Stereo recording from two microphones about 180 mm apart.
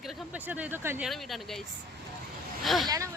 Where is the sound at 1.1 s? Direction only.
Centre (ahead or behind).